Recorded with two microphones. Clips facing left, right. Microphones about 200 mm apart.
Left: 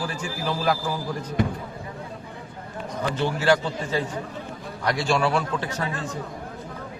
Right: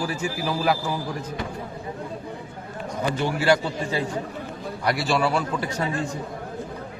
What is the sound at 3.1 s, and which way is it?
A man's voice, 10° right (ahead or behind).